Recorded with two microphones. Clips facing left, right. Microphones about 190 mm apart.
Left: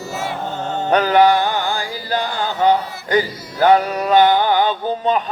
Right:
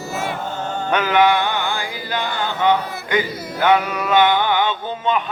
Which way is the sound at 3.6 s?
35° left (ahead or behind).